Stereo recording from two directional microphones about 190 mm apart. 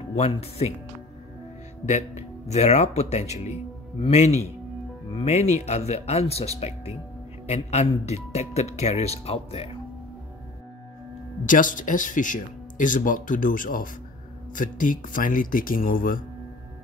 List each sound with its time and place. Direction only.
0.1 s speech: 35° left (ahead or behind)
1.9 s speech: 35° left (ahead or behind)
11.4 s speech: 45° left (ahead or behind)